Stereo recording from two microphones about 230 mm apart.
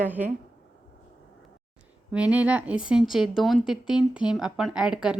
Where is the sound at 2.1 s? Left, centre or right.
Centre.